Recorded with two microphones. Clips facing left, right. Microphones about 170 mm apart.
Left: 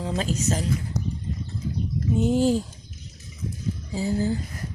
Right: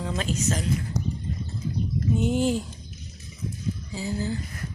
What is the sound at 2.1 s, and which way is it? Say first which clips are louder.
Speech: left 4 dB; 35° left (ahead or behind).